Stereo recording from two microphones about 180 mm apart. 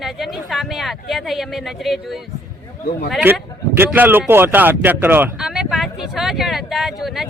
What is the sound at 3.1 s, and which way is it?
Speech, 10° right (ahead or behind).